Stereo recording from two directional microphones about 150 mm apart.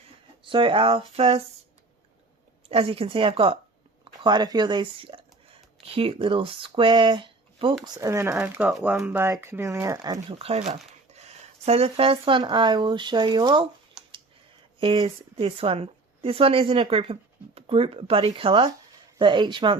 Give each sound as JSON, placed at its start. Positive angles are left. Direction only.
{"t": 0.4, "sound": "speech", "side_deg": -35}
{"t": 2.6, "sound": "speech", "side_deg": -40}
{"t": 7.9, "sound": "speech", "side_deg": -20}
{"t": 8.8, "sound": "speech", "side_deg": -10}
{"t": 10.2, "sound": "speech", "side_deg": -40}
{"t": 14.0, "sound": "a sound", "side_deg": -5}
{"t": 14.8, "sound": "a woman's voice", "side_deg": -35}